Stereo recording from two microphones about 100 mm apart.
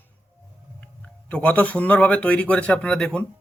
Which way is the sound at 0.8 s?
15° left (ahead or behind).